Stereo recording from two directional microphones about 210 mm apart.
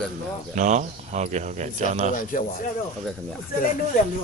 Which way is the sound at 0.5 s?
35° right (ahead or behind).